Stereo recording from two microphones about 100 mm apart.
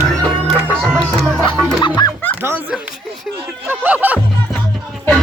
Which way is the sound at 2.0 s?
45° left (ahead or behind).